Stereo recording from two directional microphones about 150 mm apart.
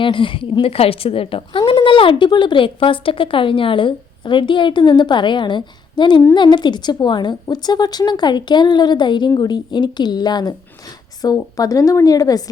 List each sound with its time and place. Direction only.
0.0 s a woman's voice: 35° left (ahead or behind)